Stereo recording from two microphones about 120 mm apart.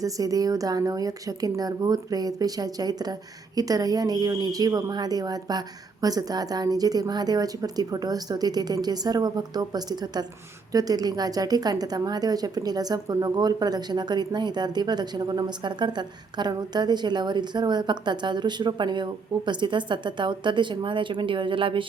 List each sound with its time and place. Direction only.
0.0 s a woman's voice: 30° right (ahead or behind); by 21.8 s 45° right (ahead or behind)